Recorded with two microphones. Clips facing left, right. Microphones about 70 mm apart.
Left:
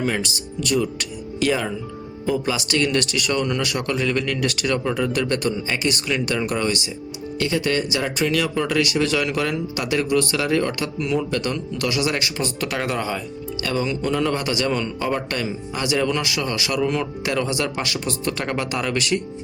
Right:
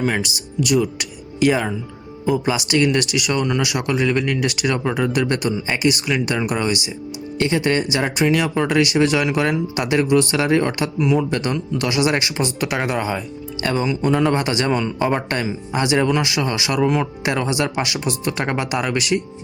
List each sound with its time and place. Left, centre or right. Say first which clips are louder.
0.0 s speech: right 2 dB; centre
7.3 s speech: right 3 dB; right
11.0 s speech: right 5 dB; centre
11.3 s speech: right 3 dB; right